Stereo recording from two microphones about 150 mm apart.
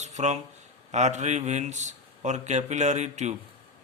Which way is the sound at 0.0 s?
50° right (ahead or behind).